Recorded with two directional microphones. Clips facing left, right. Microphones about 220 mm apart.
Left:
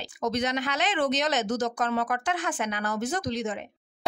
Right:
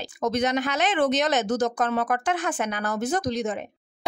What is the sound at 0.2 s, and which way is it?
Speech, 50° right (ahead or behind).